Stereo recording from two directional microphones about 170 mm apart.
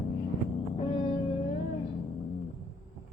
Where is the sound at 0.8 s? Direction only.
25° left (ahead or behind).